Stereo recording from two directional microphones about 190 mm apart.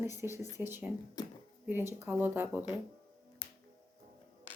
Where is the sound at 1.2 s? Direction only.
20° left (ahead or behind).